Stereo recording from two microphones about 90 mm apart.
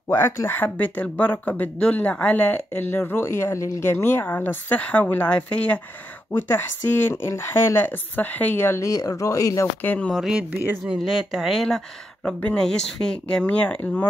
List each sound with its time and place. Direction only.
0.1 s speech: 25° left (ahead or behind)
7.1 s speech: 30° left (ahead or behind)
8.8 s speech: 40° left (ahead or behind)
9.8 s speech: 15° left (ahead or behind)
10.3 s speech: 20° right (ahead or behind)
11.0 s speech: 5° right (ahead or behind); by 14.0 s 15° left (ahead or behind)